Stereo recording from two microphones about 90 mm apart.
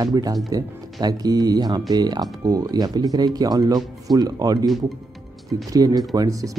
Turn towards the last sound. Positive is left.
turn(degrees=-40)  # may be behind; listen again after turning